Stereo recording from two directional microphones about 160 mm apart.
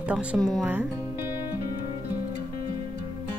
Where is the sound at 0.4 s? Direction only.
5° left (ahead or behind).